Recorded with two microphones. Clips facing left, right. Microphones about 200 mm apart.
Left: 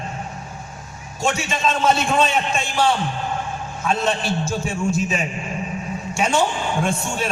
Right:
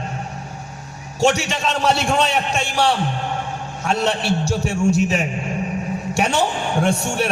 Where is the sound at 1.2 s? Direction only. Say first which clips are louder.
Right 3 dB; 70° right (ahead or behind).